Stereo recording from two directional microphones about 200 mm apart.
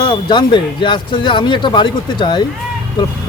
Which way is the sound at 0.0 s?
25° left (ahead or behind).